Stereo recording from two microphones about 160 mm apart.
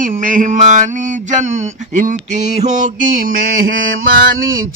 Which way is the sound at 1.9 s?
50° right (ahead or behind).